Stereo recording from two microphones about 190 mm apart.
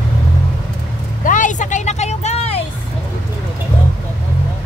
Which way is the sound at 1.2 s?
40° left (ahead or behind).